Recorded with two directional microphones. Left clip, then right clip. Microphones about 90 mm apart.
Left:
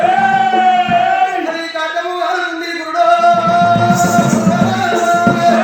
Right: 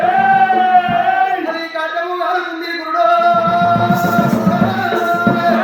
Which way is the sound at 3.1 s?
20° left (ahead or behind).